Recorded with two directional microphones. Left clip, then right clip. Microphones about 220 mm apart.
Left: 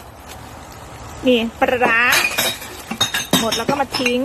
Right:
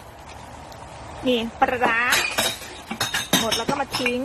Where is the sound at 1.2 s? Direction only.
5° left (ahead or behind).